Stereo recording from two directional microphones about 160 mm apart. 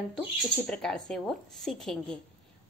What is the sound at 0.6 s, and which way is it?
A woman's voice, 5° left (ahead or behind).